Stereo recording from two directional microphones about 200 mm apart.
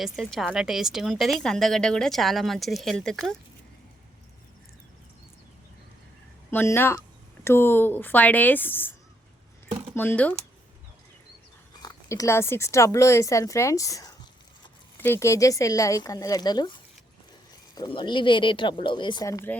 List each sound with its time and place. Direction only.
0.0 s a woman's voice: centre (ahead or behind)
6.5 s speech: 10° left (ahead or behind)
11.8 s speech: 20° left (ahead or behind)
17.7 s speech: 25° left (ahead or behind)